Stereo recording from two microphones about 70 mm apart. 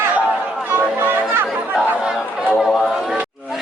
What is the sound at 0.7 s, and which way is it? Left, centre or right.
Chatter, right.